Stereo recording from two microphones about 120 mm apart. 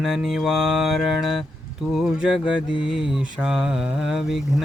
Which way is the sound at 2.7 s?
45° left (ahead or behind).